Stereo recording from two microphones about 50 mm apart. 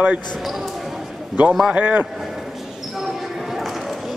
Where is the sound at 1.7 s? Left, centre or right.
Right.